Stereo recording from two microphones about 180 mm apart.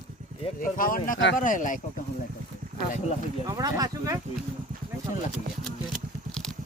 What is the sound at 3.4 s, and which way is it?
Speech, 20° right (ahead or behind).